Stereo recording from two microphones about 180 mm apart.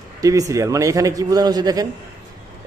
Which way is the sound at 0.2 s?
20° right (ahead or behind).